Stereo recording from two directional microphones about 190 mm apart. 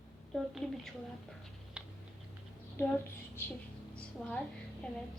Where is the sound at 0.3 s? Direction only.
Centre (ahead or behind).